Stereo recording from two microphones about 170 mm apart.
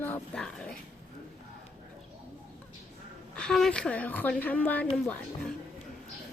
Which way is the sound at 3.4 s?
5° left (ahead or behind).